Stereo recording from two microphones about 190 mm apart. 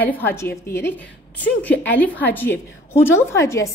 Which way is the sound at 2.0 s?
10° left (ahead or behind).